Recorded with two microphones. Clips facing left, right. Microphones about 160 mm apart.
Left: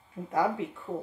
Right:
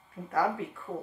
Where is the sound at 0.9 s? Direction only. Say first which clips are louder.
Left 2 dB; 5° left (ahead or behind).